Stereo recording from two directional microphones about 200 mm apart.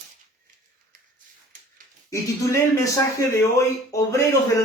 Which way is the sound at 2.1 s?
15° left (ahead or behind).